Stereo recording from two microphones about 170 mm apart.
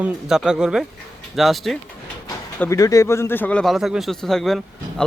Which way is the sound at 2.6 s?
20° left (ahead or behind).